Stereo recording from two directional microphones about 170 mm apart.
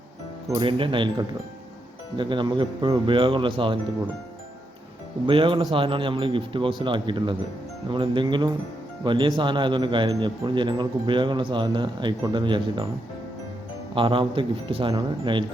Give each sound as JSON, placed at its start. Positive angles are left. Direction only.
{"t": 0.5, "sound": "speech", "side_deg": -30}
{"t": 2.1, "sound": "speech", "side_deg": -30}
{"t": 5.2, "sound": "speech", "side_deg": -30}
{"t": 13.9, "sound": "speech", "side_deg": -30}